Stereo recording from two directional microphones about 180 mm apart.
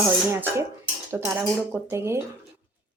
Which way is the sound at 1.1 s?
5° right (ahead or behind).